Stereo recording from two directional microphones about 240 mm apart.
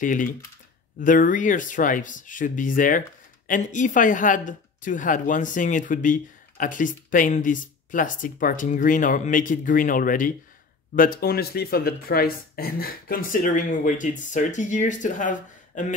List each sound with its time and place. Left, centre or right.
0.0 s a woman's voice: left